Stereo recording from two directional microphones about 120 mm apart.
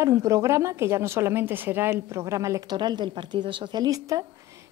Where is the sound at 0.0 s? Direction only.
25° right (ahead or behind).